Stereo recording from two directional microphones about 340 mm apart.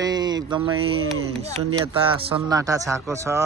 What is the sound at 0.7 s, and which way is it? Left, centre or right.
Speech, right.